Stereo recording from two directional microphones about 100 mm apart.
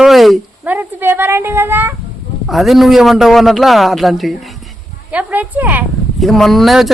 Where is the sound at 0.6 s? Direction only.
20° right (ahead or behind).